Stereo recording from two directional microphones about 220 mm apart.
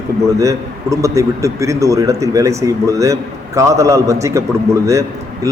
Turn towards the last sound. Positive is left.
turn(degrees=-15)  # may be behind; listen again after turning